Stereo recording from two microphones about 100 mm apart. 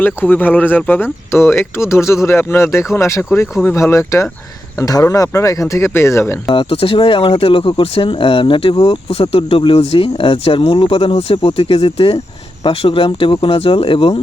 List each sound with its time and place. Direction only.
0.0 s speech: 20° left (ahead or behind)
6.5 s speech: 60° left (ahead or behind)